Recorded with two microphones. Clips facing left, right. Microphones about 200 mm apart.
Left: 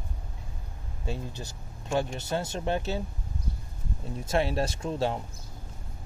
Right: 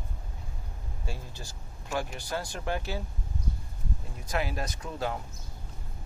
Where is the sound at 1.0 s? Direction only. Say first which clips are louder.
Left 7 dB; 20° left (ahead or behind).